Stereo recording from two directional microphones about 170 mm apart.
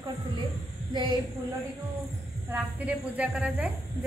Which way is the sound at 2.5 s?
10° right (ahead or behind).